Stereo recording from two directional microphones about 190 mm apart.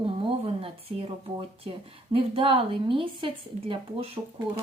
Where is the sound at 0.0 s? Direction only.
25° right (ahead or behind).